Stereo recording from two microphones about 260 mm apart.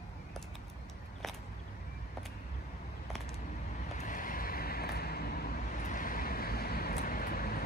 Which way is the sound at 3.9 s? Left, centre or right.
Left.